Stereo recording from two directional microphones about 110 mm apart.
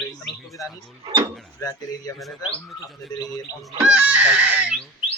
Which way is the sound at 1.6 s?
35° left (ahead or behind).